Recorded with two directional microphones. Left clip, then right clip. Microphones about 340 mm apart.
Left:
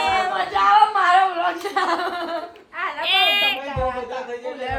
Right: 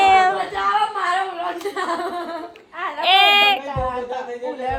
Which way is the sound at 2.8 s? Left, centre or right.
Right.